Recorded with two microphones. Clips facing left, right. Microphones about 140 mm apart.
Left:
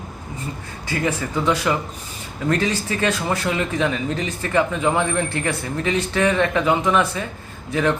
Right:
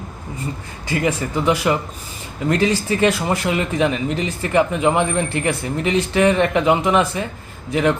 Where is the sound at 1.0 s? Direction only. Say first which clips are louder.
Right 2 dB; 15° right (ahead or behind).